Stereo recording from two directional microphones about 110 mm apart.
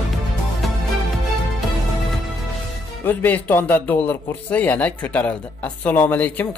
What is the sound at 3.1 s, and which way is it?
A man's voice, 15° left (ahead or behind).